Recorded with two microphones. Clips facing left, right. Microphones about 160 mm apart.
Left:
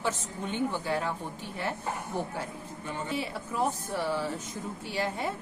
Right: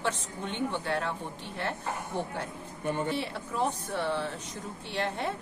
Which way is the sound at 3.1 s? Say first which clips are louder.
Even; 5° left (ahead or behind).